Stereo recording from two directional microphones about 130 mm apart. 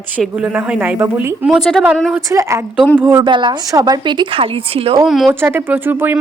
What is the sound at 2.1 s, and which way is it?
Speech, 20° right (ahead or behind).